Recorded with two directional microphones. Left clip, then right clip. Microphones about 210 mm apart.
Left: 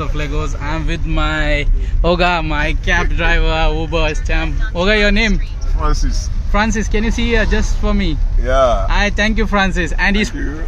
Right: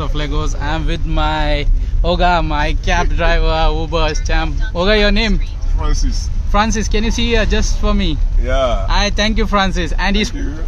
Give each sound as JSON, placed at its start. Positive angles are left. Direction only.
{"t": 0.0, "sound": "speech", "side_deg": -10}
{"t": 2.0, "sound": "speech", "side_deg": 15}
{"t": 2.3, "sound": "speech", "side_deg": -5}
{"t": 6.5, "sound": "speech", "side_deg": 0}